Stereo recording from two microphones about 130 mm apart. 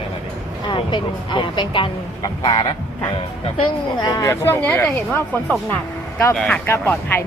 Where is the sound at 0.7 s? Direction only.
40° left (ahead or behind).